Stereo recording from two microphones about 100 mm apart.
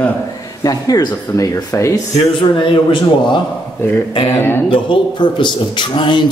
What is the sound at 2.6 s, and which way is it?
Speech, 50° left (ahead or behind).